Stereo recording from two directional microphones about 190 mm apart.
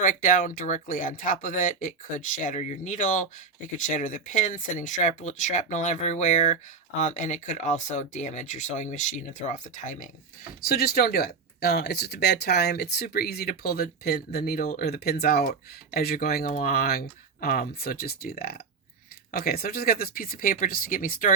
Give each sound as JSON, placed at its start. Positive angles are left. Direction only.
{"t": 0.0, "sound": "speech", "side_deg": 45}
{"t": 10.6, "sound": "speech", "side_deg": 55}